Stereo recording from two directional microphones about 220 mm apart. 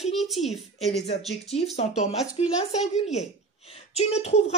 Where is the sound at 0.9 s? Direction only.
30° left (ahead or behind).